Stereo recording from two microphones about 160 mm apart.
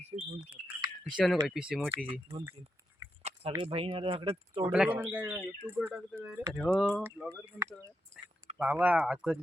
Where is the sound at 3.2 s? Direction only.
40° right (ahead or behind).